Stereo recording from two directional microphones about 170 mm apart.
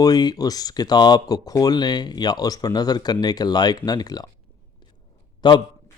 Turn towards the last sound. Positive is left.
turn(degrees=25)  # may be behind; listen again after turning